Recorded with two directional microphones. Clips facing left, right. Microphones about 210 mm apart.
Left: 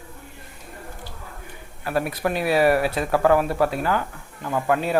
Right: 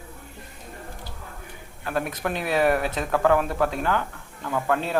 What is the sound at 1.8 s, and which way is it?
Speech, 5° left (ahead or behind).